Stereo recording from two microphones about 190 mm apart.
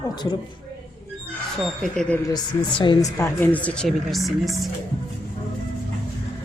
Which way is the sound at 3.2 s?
10° left (ahead or behind).